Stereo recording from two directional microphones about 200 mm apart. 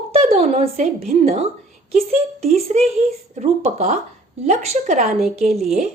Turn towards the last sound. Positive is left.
turn(degrees=0)  # may be behind; listen again after turning